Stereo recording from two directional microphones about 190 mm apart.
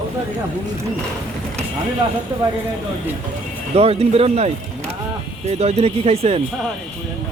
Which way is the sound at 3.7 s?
30° right (ahead or behind).